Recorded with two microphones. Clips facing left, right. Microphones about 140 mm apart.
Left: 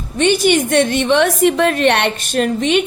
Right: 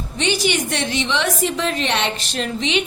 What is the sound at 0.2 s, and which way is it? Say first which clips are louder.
A woman's voice: left 7 dB; 50° left (ahead or behind).